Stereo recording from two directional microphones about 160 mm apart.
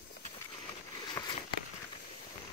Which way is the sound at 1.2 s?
20° left (ahead or behind).